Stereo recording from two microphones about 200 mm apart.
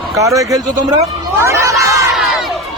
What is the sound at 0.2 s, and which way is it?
Speech, 15° right (ahead or behind).